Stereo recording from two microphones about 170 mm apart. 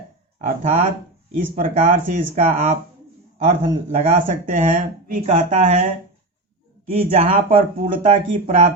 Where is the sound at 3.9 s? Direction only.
50° right (ahead or behind).